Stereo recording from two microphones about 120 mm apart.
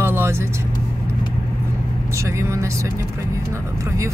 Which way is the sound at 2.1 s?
25° right (ahead or behind).